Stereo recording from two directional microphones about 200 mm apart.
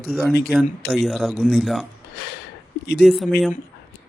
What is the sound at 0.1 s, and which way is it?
Speech, centre (ahead or behind).